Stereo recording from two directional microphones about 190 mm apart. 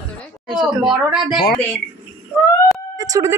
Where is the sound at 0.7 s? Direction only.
25° right (ahead or behind).